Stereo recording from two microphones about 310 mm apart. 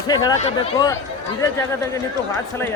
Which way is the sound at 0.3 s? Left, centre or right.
Centre.